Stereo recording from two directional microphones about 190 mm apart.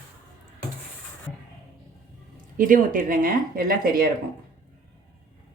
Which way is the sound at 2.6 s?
45° right (ahead or behind).